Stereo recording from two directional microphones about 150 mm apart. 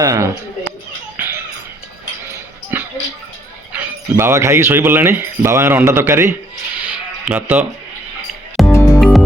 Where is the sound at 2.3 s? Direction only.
15° right (ahead or behind).